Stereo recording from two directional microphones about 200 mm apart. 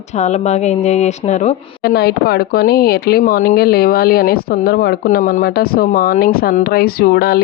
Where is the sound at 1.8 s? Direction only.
55° left (ahead or behind).